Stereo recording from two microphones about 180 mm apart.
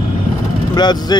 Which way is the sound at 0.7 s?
25° left (ahead or behind).